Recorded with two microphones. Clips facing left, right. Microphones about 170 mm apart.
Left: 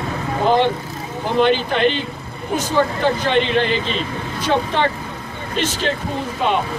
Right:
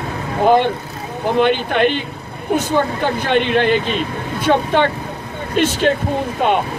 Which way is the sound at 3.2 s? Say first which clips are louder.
Right 5 dB; 55° right (ahead or behind).